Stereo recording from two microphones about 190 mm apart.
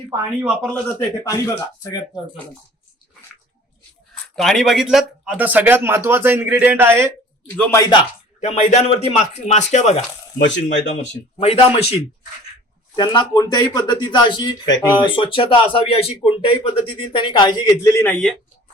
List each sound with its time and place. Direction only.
0.1 s speech: 5° right (ahead or behind)
0.7 s speech: 10° left (ahead or behind)
4.4 s speech: centre (ahead or behind)
7.5 s speech: 10° left (ahead or behind)
8.4 s speech: 35° left (ahead or behind)
10.3 s speech: 70° left (ahead or behind)
11.3 s speech: 30° left (ahead or behind)
13.0 s speech: 20° left (ahead or behind); by 18.3 s 5° left (ahead or behind)